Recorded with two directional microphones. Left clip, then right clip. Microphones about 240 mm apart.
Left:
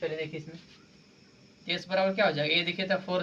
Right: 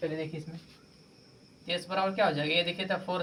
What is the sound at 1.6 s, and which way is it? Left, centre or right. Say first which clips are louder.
Speech: left 2 dB; centre.